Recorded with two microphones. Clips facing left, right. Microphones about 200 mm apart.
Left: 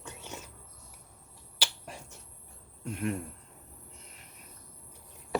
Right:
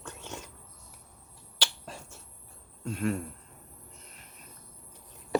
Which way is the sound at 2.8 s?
20° left (ahead or behind).